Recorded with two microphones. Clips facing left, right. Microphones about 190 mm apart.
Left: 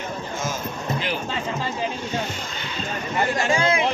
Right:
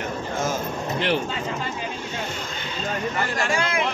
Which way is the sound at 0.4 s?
60° right (ahead or behind).